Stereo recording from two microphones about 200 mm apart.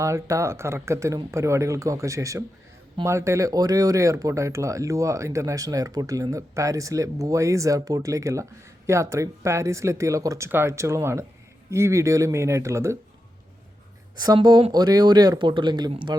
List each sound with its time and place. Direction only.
0.0 s speech: 15° right (ahead or behind)
14.2 s speech: 20° right (ahead or behind)